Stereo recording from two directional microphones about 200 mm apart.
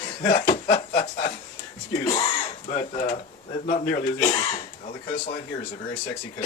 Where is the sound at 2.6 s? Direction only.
35° left (ahead or behind).